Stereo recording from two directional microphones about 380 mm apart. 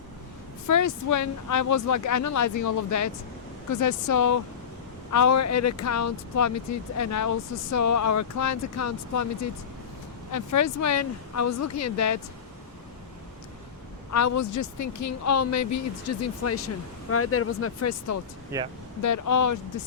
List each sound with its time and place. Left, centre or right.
0.7 s speech: left
14.1 s speech: left
18.5 s speech: centre
19.0 s speech: left